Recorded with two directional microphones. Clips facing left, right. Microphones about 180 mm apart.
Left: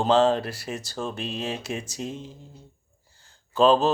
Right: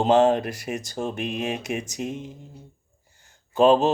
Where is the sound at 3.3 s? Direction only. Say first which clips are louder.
Right 2 dB; 20° right (ahead or behind).